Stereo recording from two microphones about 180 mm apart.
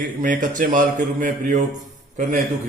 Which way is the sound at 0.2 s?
50° right (ahead or behind).